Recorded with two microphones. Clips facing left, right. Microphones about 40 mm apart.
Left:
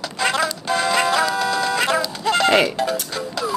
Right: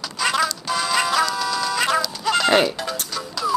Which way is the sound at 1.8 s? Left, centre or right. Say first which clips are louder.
Left 1 dB; centre.